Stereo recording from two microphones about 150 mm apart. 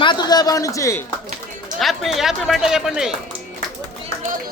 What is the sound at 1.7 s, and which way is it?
Speech, centre (ahead or behind).